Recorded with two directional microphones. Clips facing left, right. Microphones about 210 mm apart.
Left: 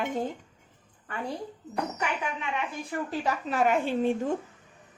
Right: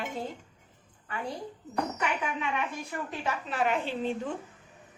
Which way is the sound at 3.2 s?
45° left (ahead or behind).